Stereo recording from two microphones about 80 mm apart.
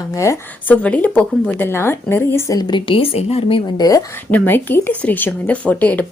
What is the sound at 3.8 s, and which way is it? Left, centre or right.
Speech, left.